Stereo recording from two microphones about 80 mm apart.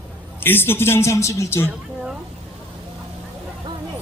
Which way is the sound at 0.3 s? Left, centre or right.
Left.